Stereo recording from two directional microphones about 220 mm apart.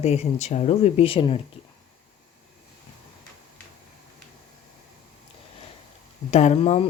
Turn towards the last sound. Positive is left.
turn(degrees=25)  # may be behind; listen again after turning